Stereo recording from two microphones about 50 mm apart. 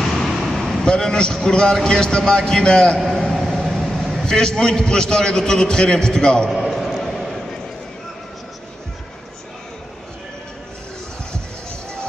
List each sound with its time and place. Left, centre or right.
0.0 s vehicle: centre
0.8 s a man's voice: centre
3.0 s a sound: centre
3.6 s vehicle: centre
4.3 s a man's voice: centre
6.5 s basketball bounce: centre